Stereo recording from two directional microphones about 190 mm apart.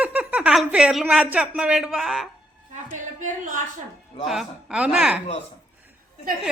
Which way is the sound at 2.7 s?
40° right (ahead or behind).